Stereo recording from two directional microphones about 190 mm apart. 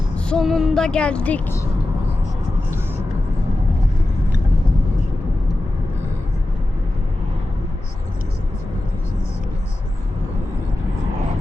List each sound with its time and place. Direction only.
0.3 s speech: centre (ahead or behind)